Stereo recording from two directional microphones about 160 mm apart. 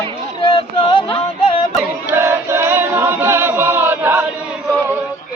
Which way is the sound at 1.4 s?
35° left (ahead or behind).